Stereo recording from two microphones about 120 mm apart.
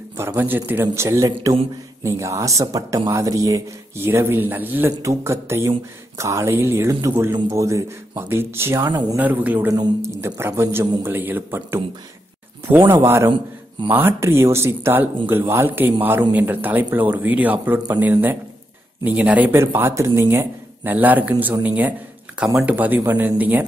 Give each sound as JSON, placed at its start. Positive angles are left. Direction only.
{"t": 0.2, "sound": "speech", "side_deg": -20}
{"t": 9.7, "sound": "speech", "side_deg": -25}
{"t": 19.0, "sound": "speech", "side_deg": -10}